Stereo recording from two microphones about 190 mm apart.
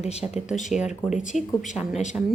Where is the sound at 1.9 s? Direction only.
40° left (ahead or behind).